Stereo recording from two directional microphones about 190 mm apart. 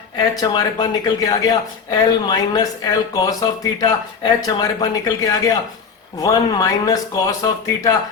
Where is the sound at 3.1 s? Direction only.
20° left (ahead or behind).